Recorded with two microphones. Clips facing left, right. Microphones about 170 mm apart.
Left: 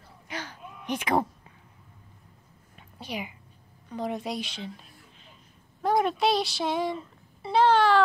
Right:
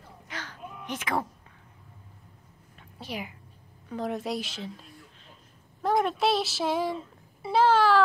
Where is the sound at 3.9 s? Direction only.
Centre (ahead or behind).